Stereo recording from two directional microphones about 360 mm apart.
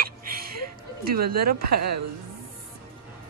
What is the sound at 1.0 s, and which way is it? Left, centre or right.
Speech, right.